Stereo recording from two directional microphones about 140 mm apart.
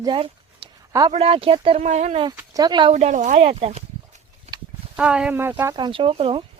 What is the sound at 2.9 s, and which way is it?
Speech, 55° right (ahead or behind).